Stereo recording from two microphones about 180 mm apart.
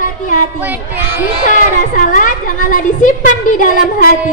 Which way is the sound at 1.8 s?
45° left (ahead or behind).